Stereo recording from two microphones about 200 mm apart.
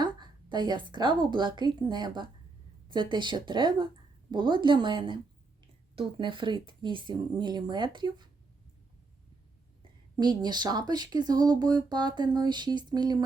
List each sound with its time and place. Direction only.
0.0 s a sound: 20° right (ahead or behind)
1.3 s speech: 25° right (ahead or behind)
10.2 s speech: 20° right (ahead or behind)